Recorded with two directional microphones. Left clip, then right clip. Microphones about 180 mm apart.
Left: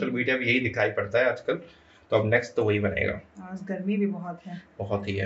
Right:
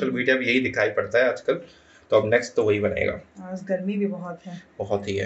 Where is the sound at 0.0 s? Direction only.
Centre (ahead or behind).